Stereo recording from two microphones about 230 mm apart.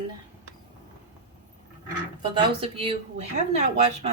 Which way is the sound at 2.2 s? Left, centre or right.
Right.